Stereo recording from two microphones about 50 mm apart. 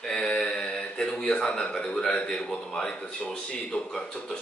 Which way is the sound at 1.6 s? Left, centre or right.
Left.